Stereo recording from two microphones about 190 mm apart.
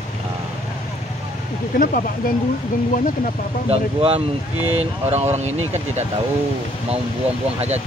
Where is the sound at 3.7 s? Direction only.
30° right (ahead or behind).